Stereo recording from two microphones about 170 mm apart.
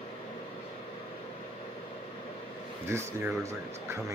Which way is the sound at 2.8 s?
15° right (ahead or behind).